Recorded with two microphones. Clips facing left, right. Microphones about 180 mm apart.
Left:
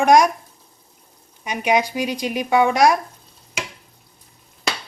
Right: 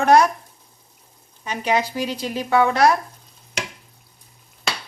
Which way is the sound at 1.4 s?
15° left (ahead or behind).